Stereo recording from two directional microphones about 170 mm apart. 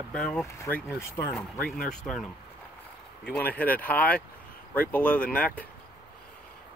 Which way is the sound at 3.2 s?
10° left (ahead or behind).